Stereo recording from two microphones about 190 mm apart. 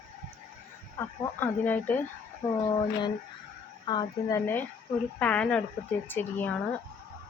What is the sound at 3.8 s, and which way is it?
Speech, 25° left (ahead or behind).